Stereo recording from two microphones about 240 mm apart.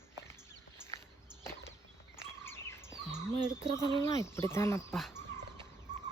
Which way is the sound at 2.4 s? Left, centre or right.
Centre.